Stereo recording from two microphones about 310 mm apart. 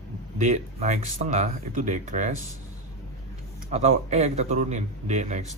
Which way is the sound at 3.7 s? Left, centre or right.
Right.